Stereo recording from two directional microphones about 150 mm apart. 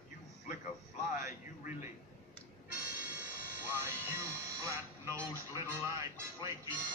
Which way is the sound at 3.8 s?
20° right (ahead or behind).